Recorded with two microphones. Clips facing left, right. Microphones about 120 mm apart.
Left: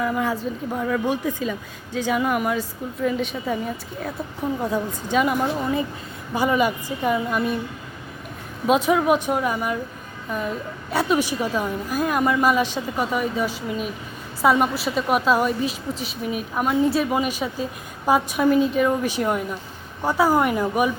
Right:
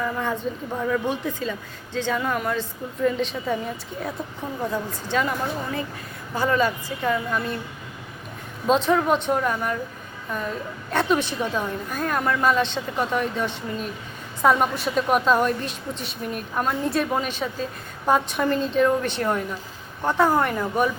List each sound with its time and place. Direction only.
0.0 s a woman's voice: 5° left (ahead or behind)
4.6 s a woman's voice: 15° left (ahead or behind)
8.6 s a woman's voice: 10° left (ahead or behind)
10.9 s a woman's voice: 10° left (ahead or behind)